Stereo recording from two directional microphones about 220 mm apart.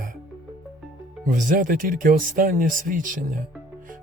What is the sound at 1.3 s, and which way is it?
Speech, 35° right (ahead or behind).